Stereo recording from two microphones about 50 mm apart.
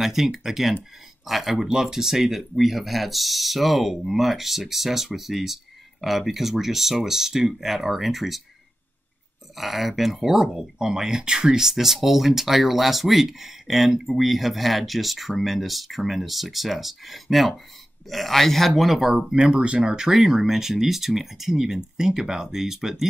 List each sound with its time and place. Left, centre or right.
0.0 s speech: centre
9.6 s speech: centre
19.1 s speech: centre